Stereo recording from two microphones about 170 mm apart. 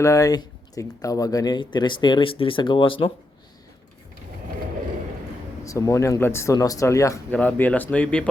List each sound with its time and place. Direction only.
0.0 s speech: 20° left (ahead or behind)
5.6 s speech: 20° left (ahead or behind)
7.3 s speech: 10° left (ahead or behind)